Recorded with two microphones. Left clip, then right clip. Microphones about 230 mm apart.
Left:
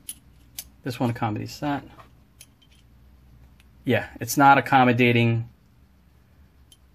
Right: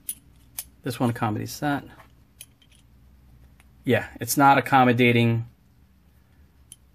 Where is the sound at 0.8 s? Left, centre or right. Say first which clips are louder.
Right 1 dB; centre.